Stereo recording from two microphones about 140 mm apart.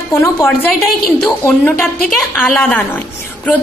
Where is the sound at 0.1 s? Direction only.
20° left (ahead or behind).